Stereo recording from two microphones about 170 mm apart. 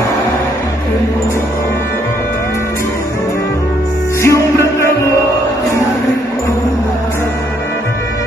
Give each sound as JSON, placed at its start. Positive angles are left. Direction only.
{"t": 4.2, "sound": "music", "side_deg": 15}